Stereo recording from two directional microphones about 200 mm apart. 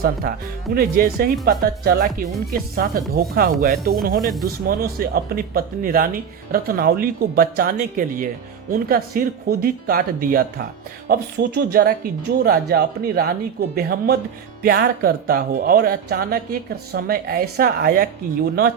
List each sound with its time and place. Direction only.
0.0 s speech: 50° right (ahead or behind)
4.2 s speech: centre (ahead or behind)
4.6 s speech: 50° right (ahead or behind)